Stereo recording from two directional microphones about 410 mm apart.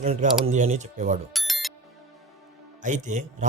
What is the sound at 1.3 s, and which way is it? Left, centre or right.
Music, centre.